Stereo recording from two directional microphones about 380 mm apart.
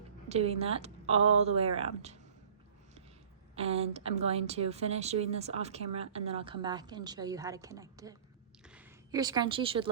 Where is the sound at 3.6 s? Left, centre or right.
Centre.